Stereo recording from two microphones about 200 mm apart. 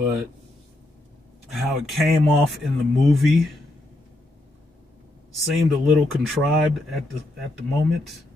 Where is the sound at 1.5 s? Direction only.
Centre (ahead or behind).